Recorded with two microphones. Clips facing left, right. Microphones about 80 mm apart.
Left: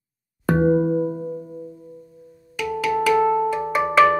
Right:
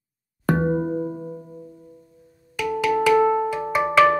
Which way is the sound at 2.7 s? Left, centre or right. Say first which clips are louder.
Right 1 dB; centre.